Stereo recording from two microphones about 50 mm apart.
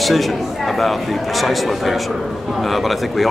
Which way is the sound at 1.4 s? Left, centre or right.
Centre.